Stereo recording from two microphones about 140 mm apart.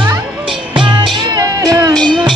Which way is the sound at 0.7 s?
35° right (ahead or behind).